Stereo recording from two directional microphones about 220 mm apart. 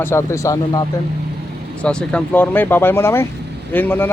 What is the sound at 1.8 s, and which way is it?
Speech, 5° left (ahead or behind).